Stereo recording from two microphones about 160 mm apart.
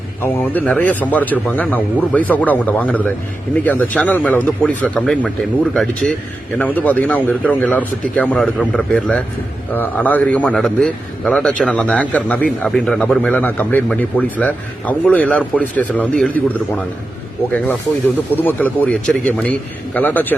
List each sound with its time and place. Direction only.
0.2 s a man's voice: 10° left (ahead or behind)
18.4 s a man's voice: 10° left (ahead or behind)